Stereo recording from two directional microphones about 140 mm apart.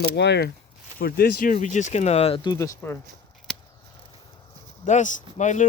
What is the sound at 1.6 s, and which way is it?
Speech, 55° left (ahead or behind).